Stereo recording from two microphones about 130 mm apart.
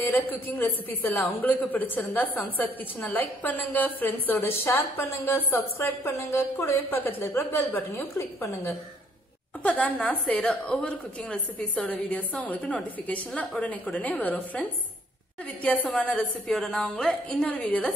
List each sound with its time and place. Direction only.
0.0 s a woman's voice: 15° left (ahead or behind)